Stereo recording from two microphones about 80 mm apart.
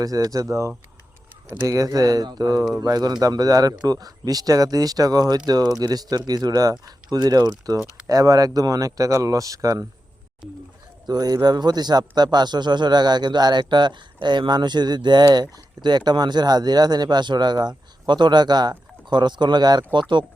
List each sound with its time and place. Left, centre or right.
0.0 s a man's voice: right
8.0 s speech: right
10.4 s speech: centre
11.0 s a man's voice: right